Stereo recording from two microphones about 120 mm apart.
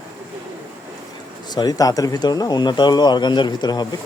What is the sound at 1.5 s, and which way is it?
Speech, 35° left (ahead or behind).